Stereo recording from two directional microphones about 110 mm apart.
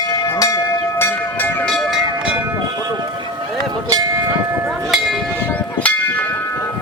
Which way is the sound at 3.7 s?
35° right (ahead or behind).